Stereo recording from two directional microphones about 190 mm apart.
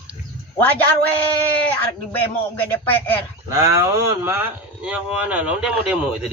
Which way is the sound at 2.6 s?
10° left (ahead or behind).